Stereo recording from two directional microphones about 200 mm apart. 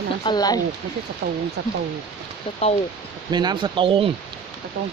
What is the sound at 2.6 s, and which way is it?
Speech, 30° left (ahead or behind).